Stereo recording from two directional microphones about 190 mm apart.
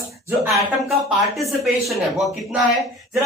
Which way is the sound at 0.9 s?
Centre (ahead or behind).